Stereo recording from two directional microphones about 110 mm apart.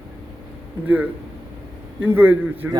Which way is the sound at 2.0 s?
20° right (ahead or behind).